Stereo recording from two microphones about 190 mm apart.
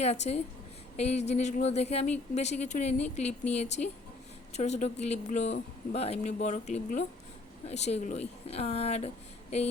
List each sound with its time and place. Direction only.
0.0 s speech: 35° left (ahead or behind)